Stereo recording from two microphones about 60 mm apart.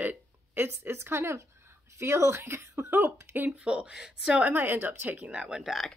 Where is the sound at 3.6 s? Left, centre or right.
Centre.